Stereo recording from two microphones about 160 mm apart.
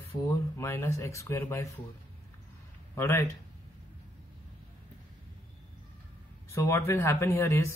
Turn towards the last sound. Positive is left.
turn(degrees=15)  # may be behind; listen again after turning